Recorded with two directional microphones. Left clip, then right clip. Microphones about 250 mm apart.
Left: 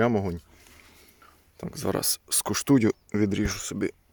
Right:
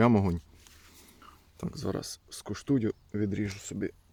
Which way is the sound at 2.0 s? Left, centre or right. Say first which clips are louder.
Left 12 dB; left.